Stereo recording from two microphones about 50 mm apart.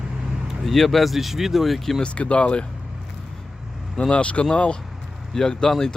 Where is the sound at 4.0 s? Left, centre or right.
Left.